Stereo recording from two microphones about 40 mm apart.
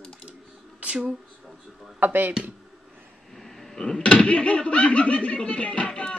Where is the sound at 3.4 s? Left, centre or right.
Centre.